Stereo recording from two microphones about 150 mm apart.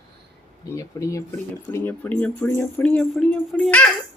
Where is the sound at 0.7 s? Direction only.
20° left (ahead or behind); by 3.9 s 5° left (ahead or behind).